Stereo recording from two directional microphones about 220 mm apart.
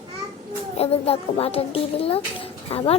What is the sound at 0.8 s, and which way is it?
A child's voice, 25° left (ahead or behind).